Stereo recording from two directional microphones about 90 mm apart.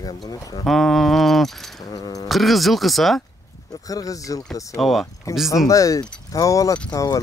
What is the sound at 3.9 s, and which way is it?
Speech, 40° left (ahead or behind).